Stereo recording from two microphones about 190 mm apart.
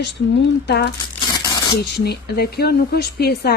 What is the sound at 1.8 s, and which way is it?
Speech, 55° left (ahead or behind).